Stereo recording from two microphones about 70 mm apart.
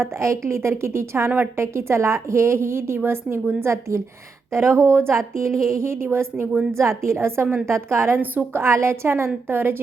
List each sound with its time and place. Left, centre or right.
0.0 s a woman's voice: right
5.5 s speech: centre
5.7 s a woman's voice: right
8.6 s a woman's voice: right